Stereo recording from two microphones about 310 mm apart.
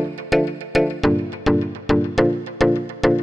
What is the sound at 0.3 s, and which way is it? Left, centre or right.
Music, centre.